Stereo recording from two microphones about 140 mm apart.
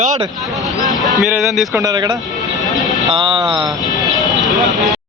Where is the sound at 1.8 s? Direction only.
30° right (ahead or behind).